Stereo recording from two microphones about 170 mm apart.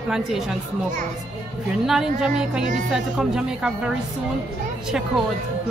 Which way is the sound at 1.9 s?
5° right (ahead or behind).